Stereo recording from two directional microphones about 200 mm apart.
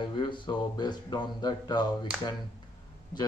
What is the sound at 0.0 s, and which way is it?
Speech, 25° left (ahead or behind).